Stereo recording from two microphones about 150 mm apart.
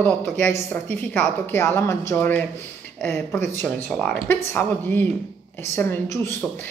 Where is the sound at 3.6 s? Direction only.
5° left (ahead or behind).